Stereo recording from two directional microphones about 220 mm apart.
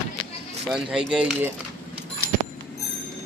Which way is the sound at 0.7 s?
5° right (ahead or behind).